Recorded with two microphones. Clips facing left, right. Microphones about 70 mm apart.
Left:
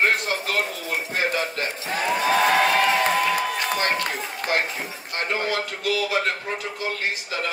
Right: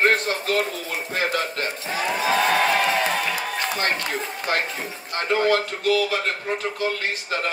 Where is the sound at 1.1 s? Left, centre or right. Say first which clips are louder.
Right 1 dB; right.